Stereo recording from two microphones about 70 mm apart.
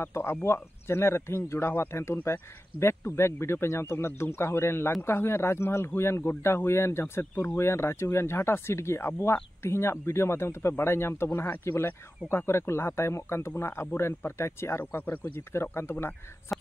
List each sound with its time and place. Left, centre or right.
0.0 s speech: left